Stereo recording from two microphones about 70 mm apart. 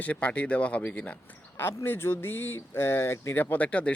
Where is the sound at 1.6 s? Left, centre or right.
Left.